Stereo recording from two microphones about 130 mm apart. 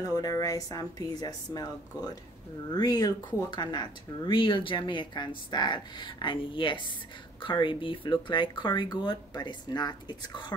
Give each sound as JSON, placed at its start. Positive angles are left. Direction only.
{"t": 0.0, "sound": "speech", "side_deg": 30}